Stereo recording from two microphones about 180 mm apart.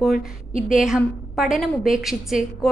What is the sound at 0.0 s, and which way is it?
A woman's voice, centre (ahead or behind).